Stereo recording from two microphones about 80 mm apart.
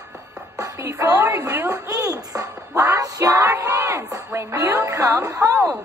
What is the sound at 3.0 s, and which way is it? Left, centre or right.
Music, right.